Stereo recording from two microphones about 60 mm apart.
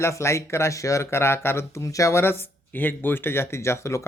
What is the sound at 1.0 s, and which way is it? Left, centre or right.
Speech, left.